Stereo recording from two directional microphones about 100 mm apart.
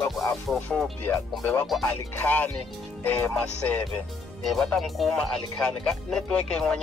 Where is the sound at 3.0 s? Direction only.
20° left (ahead or behind).